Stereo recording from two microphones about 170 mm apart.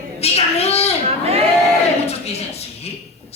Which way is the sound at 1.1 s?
35° right (ahead or behind).